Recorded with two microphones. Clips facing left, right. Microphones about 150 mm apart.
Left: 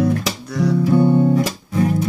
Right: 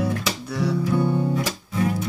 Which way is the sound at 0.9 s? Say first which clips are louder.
Left 10 dB; 35° left (ahead or behind).